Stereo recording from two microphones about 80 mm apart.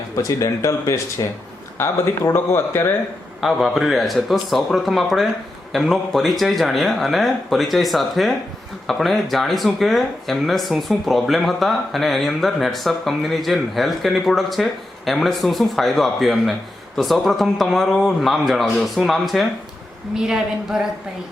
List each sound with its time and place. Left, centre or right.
0.2 s speech: left
3.4 s a woman's voice: centre